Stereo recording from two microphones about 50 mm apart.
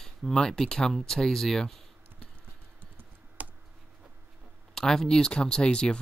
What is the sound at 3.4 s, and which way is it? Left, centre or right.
Computer keyboard, right.